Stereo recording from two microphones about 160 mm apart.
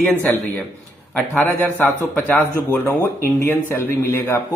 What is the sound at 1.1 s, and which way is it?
A man's voice, 10° left (ahead or behind).